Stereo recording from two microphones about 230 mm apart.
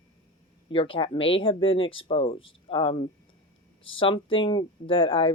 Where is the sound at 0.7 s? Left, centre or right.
Left.